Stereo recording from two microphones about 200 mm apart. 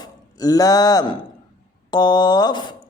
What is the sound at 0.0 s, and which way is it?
Speech, 20° left (ahead or behind).